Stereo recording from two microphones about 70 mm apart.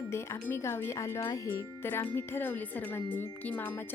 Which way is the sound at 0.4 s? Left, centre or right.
Left.